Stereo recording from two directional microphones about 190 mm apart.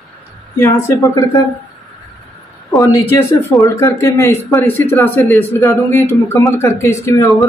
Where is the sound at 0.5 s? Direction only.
15° left (ahead or behind).